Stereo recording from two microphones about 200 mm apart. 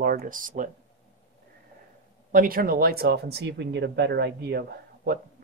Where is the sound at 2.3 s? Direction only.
45° right (ahead or behind).